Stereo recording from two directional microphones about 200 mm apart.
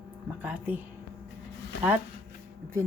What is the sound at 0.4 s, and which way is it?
Speech, 5° right (ahead or behind).